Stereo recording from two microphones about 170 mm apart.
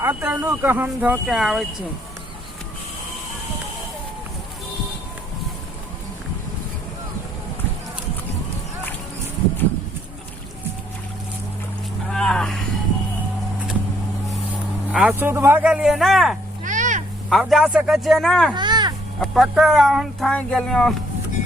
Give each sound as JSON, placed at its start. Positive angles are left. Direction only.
{"t": 0.0, "sound": "speech", "side_deg": -10}
{"t": 12.1, "sound": "speech", "side_deg": 5}
{"t": 14.9, "sound": "speech", "side_deg": -10}
{"t": 16.6, "sound": "a sound", "side_deg": -45}
{"t": 17.2, "sound": "speech", "side_deg": 0}
{"t": 18.5, "sound": "a sound", "side_deg": -25}
{"t": 19.2, "sound": "speech", "side_deg": 0}